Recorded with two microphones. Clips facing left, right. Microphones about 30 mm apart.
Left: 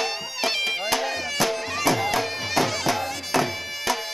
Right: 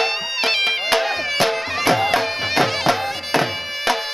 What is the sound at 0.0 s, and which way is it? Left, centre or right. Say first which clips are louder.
Music: right 6 dB; right.